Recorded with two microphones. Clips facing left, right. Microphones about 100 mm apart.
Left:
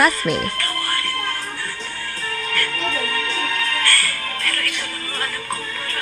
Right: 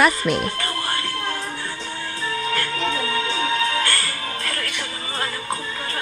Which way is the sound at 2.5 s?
20° right (ahead or behind).